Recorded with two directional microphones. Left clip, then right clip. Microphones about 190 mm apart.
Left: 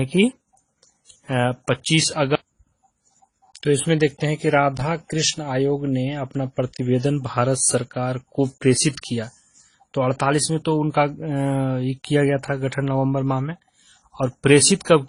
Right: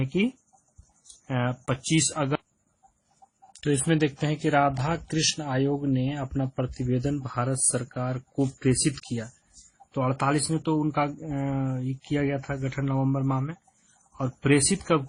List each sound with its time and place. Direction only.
1.3 s speech: 55° left (ahead or behind)
3.5 s speech: 45° left (ahead or behind)
6.8 s speech: 55° left (ahead or behind)